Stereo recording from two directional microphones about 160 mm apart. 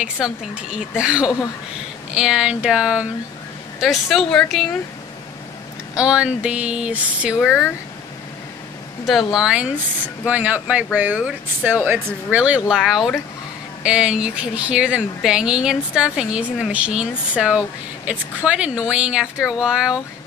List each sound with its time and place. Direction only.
0.0 s a woman's voice: 5° right (ahead or behind)
5.9 s speech: 5° right (ahead or behind)
9.0 s a woman's voice: 5° right (ahead or behind)